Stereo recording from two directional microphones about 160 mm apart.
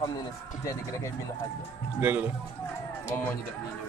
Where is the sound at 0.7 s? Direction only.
20° left (ahead or behind).